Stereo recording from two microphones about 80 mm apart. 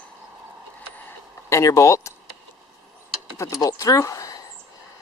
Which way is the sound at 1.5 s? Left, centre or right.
Left.